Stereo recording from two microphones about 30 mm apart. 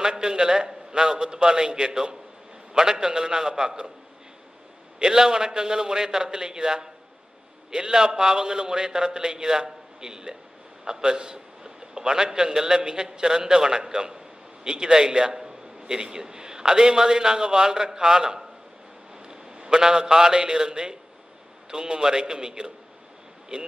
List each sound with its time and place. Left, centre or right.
0.2 s a man's voice: right
4.9 s a man's voice: right
23.5 s speech: right